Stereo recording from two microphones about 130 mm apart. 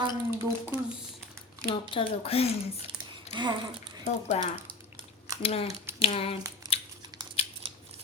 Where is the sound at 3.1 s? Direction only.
40° right (ahead or behind).